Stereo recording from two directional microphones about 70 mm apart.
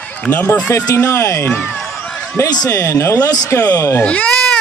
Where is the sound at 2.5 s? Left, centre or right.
Left.